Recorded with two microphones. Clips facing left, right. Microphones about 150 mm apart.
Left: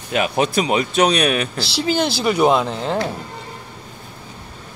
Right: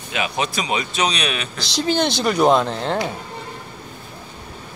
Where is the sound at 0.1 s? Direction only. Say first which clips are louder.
Left 5 dB; 50° left (ahead or behind).